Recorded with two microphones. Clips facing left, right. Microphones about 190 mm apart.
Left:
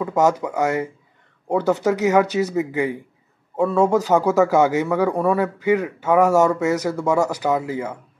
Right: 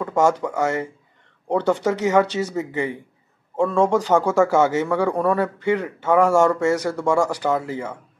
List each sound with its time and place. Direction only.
0.0 s speech: 5° left (ahead or behind)